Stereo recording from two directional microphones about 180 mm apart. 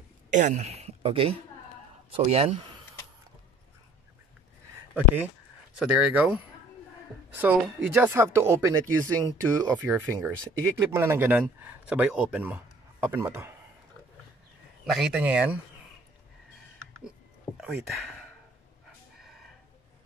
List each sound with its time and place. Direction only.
0.3 s speech: 40° right (ahead or behind)
4.9 s a man's voice: 10° right (ahead or behind)
15.0 s speech: 5° right (ahead or behind)
17.6 s speech: 5° right (ahead or behind)